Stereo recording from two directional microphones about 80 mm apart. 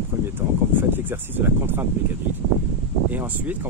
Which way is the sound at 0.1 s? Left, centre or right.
Right.